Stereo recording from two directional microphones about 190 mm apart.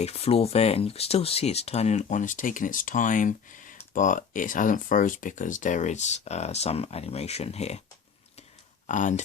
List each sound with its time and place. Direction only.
0.0 s speech: 30° left (ahead or behind)
8.9 s speech: 40° left (ahead or behind)